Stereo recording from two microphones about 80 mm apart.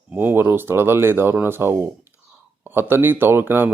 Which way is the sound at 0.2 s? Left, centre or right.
Right.